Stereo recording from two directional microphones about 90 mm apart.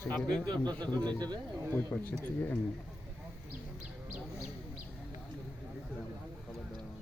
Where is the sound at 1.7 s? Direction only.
20° left (ahead or behind).